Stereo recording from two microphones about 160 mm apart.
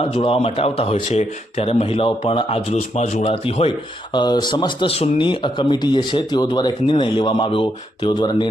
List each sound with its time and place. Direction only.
0.0 s speech: 35° left (ahead or behind)